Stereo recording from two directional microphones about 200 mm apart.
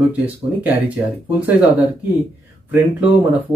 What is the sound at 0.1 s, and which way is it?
Speech, 5° right (ahead or behind).